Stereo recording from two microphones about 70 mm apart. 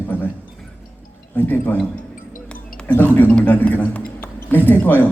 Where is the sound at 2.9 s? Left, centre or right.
Left.